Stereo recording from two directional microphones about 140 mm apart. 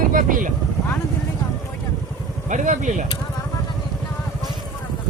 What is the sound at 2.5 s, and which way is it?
Speech, 60° right (ahead or behind).